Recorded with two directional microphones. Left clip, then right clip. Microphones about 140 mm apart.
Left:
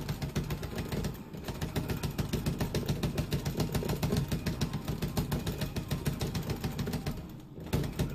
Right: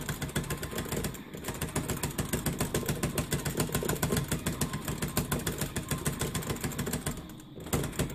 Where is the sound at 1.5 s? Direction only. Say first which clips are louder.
Right 2 dB; 30° right (ahead or behind).